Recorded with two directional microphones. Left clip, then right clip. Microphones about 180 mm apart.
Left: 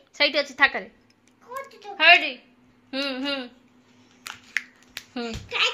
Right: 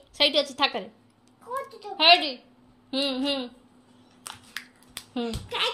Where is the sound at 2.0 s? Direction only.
15° left (ahead or behind).